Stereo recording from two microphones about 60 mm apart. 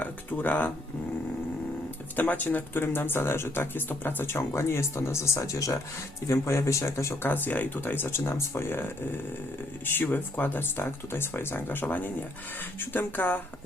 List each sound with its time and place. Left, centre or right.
0.0 s a sound: left
2.1 s speech: left
2.8 s speech: left
6.4 s speech: left
7.3 s speech: left